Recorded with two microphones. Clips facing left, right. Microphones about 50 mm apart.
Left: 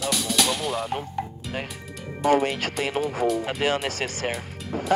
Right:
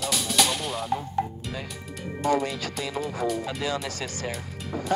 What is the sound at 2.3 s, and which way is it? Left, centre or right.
Speech, left.